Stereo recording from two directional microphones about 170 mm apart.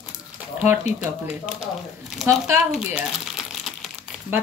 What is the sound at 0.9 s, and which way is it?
Speech, 40° left (ahead or behind).